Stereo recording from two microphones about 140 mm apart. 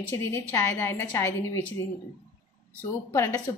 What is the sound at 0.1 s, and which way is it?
A woman's voice, 15° left (ahead or behind).